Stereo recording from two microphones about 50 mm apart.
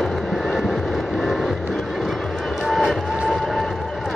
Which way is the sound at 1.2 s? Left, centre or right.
Centre.